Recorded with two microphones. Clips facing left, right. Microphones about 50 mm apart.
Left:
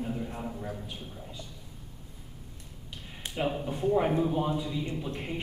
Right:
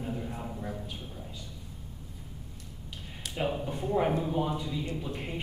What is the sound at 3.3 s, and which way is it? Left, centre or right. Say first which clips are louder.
A man's voice: left 1 dB; centre.